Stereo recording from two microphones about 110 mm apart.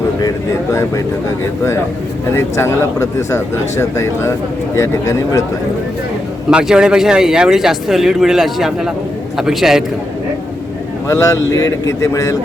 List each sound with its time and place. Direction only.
0.2 s a man's voice: 30° left (ahead or behind)
2.3 s speech: 25° left (ahead or behind)
6.5 s speech: 10° right (ahead or behind)
11.1 s speech: 30° left (ahead or behind)